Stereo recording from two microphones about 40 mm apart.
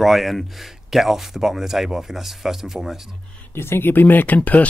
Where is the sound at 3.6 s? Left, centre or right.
Left.